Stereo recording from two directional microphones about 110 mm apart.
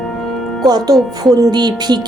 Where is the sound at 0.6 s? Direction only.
35° right (ahead or behind).